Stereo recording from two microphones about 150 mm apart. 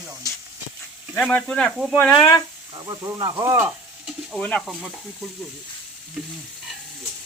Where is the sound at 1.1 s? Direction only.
10° left (ahead or behind).